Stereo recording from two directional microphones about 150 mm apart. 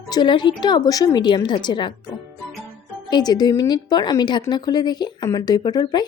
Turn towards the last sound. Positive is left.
turn(degrees=25)  # may be behind; listen again after turning